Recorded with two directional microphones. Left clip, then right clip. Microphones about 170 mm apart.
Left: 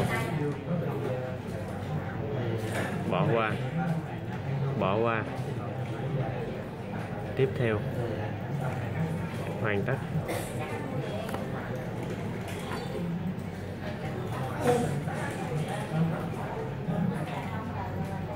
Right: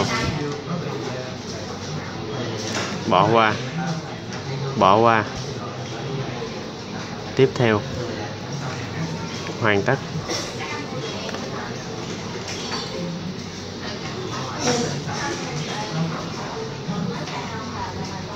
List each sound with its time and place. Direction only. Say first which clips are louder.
3.1 s speech: right 13 dB; 30° right (ahead or behind)
4.7 s speech: right 13 dB; 30° right (ahead or behind)
7.3 s speech: right 11 dB; 30° right (ahead or behind)
9.6 s speech: right 11 dB; 25° right (ahead or behind)